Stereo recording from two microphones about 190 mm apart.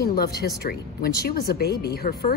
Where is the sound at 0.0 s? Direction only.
55° left (ahead or behind).